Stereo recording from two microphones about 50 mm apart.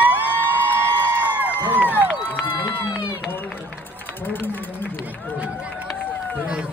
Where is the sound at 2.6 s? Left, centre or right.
Right.